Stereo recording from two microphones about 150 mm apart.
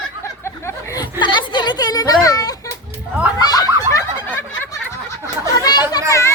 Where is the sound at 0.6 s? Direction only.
25° left (ahead or behind).